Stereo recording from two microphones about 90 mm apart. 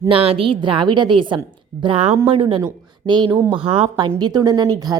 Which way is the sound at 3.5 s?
85° right.